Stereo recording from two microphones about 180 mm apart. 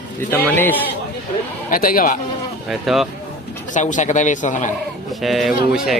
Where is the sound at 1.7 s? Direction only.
50° left (ahead or behind).